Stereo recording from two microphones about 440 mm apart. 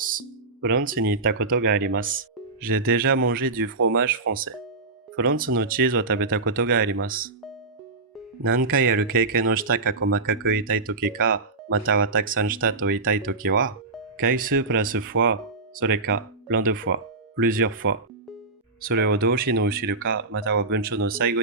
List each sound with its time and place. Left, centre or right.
0.0 s music: centre
1.1 s speech: right
8.4 s speech: centre
11.8 s speech: right